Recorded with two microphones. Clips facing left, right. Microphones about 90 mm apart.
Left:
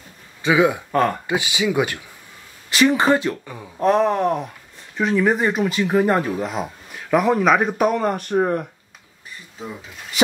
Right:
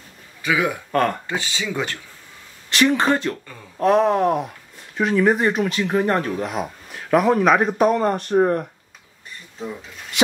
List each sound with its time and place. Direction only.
0.4 s speech: 20° left (ahead or behind)
0.9 s speech: 5° left (ahead or behind)
3.7 s speech: centre (ahead or behind)
9.6 s speech: 5° left (ahead or behind)